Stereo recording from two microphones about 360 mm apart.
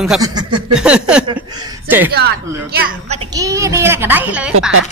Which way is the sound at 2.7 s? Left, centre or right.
Centre.